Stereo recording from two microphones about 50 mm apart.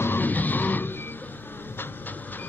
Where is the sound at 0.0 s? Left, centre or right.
Left.